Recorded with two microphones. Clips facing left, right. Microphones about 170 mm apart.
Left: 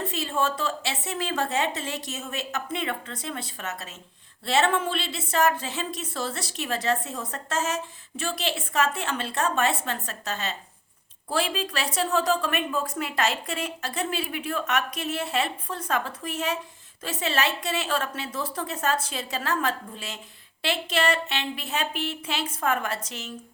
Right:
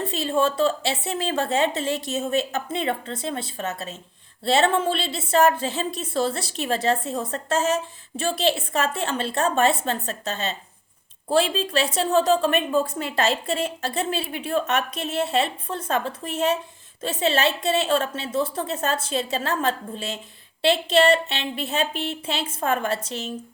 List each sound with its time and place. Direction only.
0.0 s a woman's voice: 30° right (ahead or behind)